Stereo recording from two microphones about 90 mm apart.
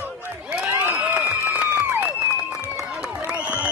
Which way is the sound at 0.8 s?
20° right (ahead or behind).